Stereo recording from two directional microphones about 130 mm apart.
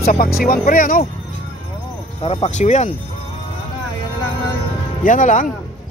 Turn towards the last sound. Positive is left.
turn(degrees=85)